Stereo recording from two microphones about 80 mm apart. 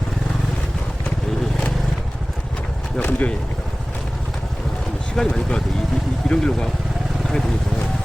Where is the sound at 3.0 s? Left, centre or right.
Left.